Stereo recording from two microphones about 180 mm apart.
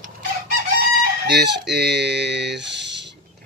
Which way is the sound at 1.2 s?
70° right (ahead or behind).